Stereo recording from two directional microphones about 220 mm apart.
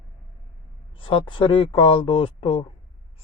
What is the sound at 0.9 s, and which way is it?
A man's voice, 20° left (ahead or behind).